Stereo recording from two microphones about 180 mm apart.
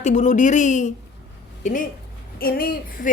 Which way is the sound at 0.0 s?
45° left (ahead or behind).